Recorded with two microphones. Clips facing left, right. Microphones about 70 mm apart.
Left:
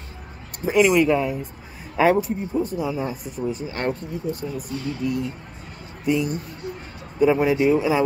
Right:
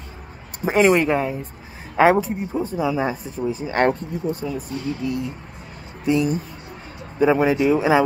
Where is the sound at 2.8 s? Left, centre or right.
Right.